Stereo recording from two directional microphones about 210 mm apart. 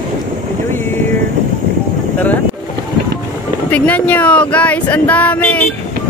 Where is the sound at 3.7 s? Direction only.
5° left (ahead or behind).